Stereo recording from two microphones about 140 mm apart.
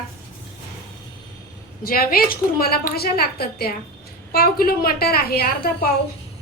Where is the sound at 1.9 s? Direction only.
90° left.